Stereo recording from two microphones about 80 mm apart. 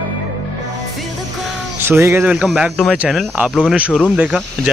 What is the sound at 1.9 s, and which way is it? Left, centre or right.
Speech, right.